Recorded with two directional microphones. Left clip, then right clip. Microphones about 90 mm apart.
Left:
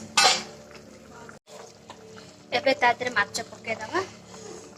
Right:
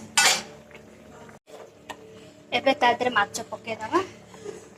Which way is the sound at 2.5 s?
20° right (ahead or behind).